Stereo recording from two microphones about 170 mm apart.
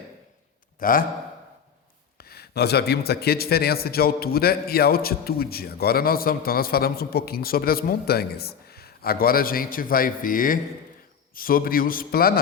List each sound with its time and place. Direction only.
0.8 s speech: 55° left (ahead or behind)
2.1 s speech: 65° left (ahead or behind)